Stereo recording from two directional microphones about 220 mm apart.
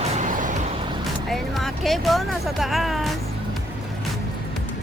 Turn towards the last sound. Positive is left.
turn(degrees=0)  # may be behind; listen again after turning